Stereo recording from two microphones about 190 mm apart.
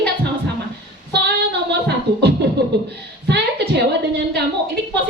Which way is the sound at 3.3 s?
65° right (ahead or behind).